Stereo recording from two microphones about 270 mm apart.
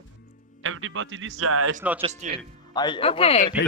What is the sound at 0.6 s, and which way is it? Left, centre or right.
Speech, right.